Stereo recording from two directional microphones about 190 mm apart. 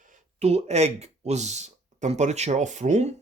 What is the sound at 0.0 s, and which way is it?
Speech, 40° right (ahead or behind).